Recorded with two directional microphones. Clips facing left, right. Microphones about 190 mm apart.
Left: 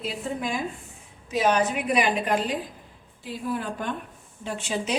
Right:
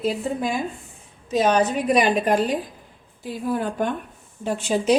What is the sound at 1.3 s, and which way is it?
A woman's voice, 35° right (ahead or behind).